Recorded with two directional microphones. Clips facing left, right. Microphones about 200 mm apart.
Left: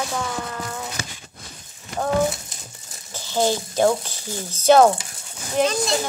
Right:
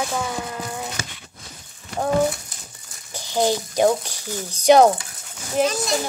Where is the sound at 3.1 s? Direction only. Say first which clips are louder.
Right 1 dB; 15° right (ahead or behind).